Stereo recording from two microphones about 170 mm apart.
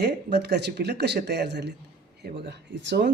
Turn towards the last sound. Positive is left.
turn(degrees=-90)